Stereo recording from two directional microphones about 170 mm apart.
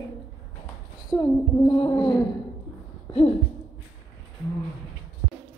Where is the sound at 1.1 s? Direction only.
25° left (ahead or behind).